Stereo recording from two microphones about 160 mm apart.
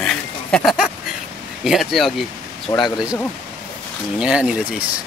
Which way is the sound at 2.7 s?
35° left (ahead or behind).